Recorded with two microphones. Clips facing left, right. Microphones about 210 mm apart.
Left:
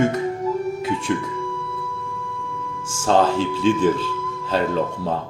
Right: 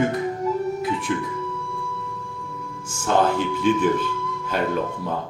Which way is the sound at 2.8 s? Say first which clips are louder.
Left 3 dB; 90° left.